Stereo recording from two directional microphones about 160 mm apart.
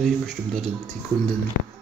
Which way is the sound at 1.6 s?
75° left (ahead or behind).